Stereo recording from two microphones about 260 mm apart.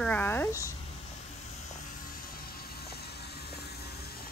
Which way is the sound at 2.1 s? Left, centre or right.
Left.